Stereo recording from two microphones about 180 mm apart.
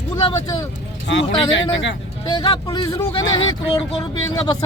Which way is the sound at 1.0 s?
90° left.